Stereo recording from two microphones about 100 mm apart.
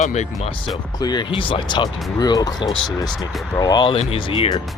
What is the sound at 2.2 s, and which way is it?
Speech, 40° left (ahead or behind).